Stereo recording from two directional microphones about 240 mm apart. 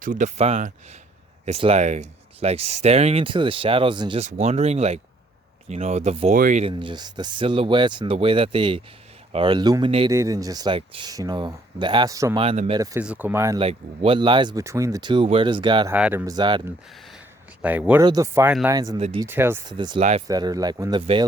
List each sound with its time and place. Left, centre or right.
0.0 s speech: right
12.8 s speech: centre
13.6 s speech: right
15.9 s speech: centre
17.6 s speech: centre
18.9 s speech: right
19.2 s speech: centre
20.0 s speech: right
20.2 s speech: centre